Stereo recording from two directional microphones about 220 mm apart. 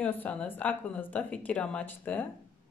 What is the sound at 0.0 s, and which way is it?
A woman's voice, 5° left (ahead or behind).